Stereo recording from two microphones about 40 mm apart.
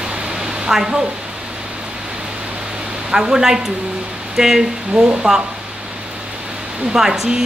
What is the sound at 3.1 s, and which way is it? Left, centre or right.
Speech, centre.